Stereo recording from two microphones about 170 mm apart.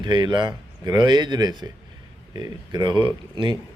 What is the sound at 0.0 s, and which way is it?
Speech, 25° right (ahead or behind).